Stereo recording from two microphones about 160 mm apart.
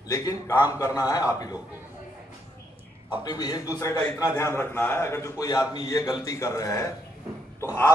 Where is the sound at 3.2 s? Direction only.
25° left (ahead or behind).